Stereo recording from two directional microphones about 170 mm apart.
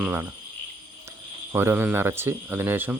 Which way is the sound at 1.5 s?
15° right (ahead or behind).